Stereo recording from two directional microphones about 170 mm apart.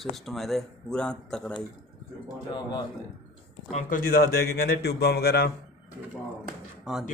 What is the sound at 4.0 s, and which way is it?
A man's voice, 60° left (ahead or behind).